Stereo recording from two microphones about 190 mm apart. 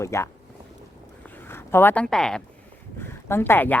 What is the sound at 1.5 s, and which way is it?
Speech, 10° left (ahead or behind).